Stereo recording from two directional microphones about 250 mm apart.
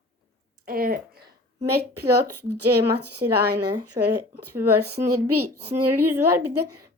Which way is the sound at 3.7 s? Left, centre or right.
Right.